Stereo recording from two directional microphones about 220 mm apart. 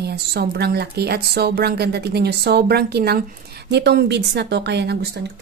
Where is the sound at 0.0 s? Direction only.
45° right (ahead or behind).